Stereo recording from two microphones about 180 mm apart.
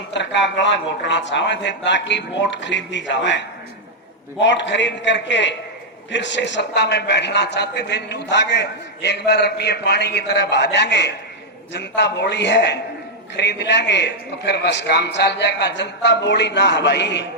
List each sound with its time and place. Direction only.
0.1 s a man's voice: 80° left